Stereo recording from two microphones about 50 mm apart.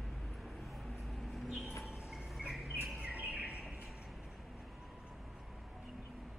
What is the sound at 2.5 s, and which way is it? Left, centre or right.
Bird, centre.